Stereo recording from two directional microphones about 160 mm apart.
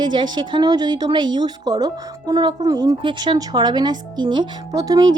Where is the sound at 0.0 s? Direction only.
30° right (ahead or behind).